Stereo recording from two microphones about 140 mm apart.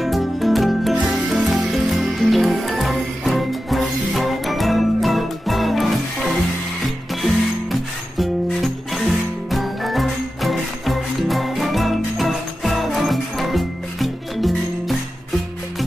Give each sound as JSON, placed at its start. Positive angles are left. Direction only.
{"t": 0.0, "sound": "music", "side_deg": 0}
{"t": 8.2, "sound": "music", "side_deg": 0}